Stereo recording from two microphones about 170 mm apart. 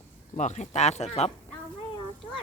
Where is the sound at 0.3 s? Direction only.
45° left (ahead or behind).